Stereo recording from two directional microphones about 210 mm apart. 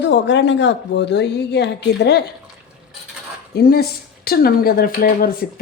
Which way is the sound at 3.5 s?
45° left (ahead or behind).